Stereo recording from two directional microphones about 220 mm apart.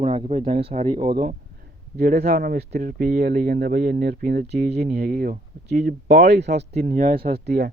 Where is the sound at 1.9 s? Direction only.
40° right (ahead or behind).